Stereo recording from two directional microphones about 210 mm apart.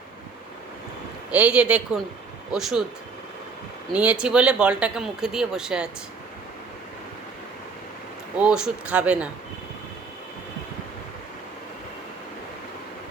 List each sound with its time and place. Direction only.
1.3 s speech: 5° right (ahead or behind)
3.9 s speech: 5° right (ahead or behind)
8.4 s speech: 5° right (ahead or behind)